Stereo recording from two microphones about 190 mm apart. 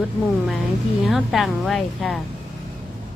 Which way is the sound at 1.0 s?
Centre (ahead or behind).